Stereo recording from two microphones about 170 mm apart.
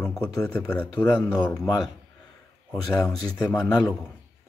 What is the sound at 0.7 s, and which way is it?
Speech, 10° left (ahead or behind).